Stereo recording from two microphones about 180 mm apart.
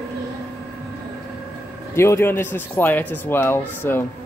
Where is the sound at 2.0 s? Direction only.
15° left (ahead or behind).